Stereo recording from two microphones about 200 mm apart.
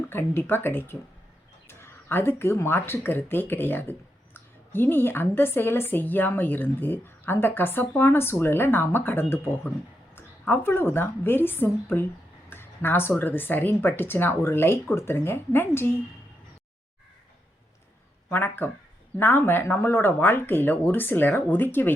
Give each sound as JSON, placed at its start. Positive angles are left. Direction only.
{"t": 0.1, "sound": "a woman's voice", "side_deg": 10}
{"t": 18.3, "sound": "a woman's voice", "side_deg": 10}